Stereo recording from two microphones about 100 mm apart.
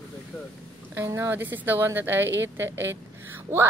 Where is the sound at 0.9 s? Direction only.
30° right (ahead or behind).